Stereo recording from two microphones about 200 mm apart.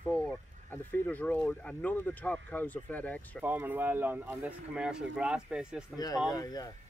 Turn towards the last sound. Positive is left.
turn(degrees=20)  # may be behind; listen again after turning